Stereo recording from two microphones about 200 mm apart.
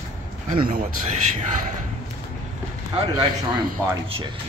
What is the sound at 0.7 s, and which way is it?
Speech, 45° right (ahead or behind).